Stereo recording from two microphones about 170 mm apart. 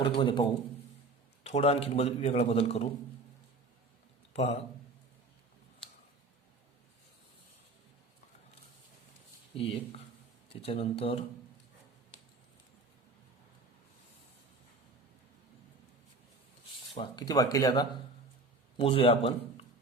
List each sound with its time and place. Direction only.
0.0 s speech: 30° left (ahead or behind)
1.5 s speech: 35° left (ahead or behind)
4.4 s speech: 40° left (ahead or behind)
9.6 s speech: 35° left (ahead or behind)
16.9 s speech: 25° left (ahead or behind)
18.8 s speech: 35° left (ahead or behind)